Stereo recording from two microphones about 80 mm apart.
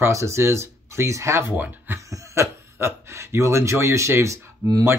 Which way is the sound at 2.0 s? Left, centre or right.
Right.